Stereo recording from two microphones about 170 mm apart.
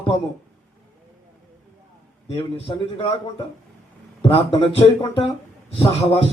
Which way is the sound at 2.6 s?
30° left (ahead or behind).